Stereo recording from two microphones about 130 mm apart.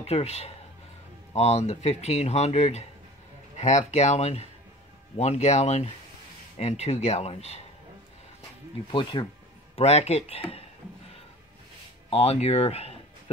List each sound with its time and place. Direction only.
0.0 s speech: 55° left (ahead or behind)
8.9 s speech: 35° left (ahead or behind)
9.8 s speech: 55° left (ahead or behind)
12.1 s speech: 50° left (ahead or behind)